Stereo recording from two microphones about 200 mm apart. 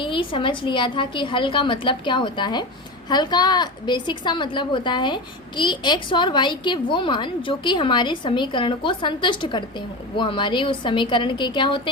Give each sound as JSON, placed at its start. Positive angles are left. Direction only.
{"t": 0.0, "sound": "a woman's voice", "side_deg": 25}